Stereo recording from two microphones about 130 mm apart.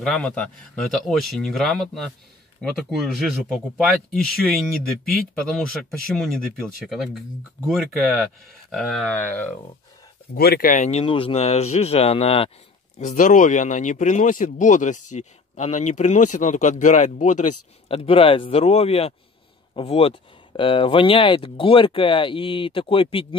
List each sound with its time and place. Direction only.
0.0 s speech: 5° left (ahead or behind)
3.5 s speech: centre (ahead or behind)
9.1 s speech: 15° left (ahead or behind)
10.6 s speech: 70° left (ahead or behind); by 12.4 s 50° left (ahead or behind)
13.0 s speech: 85° left; by 17.6 s 70° left (ahead or behind)
17.8 s speech: 45° left (ahead or behind)